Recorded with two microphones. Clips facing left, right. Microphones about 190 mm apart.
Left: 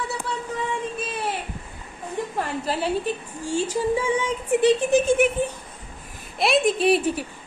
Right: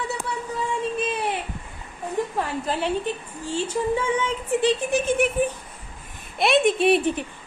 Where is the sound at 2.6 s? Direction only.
35° left (ahead or behind).